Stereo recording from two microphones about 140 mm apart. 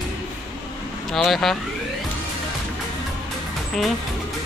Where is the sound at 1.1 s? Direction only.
Centre (ahead or behind).